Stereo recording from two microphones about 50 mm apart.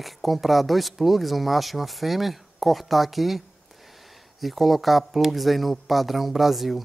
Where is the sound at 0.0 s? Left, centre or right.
Centre.